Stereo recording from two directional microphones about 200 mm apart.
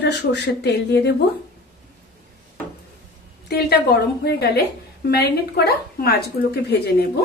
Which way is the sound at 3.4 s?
50° left (ahead or behind).